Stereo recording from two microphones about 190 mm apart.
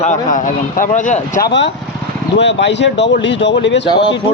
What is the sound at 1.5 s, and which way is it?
Speech, 70° left (ahead or behind).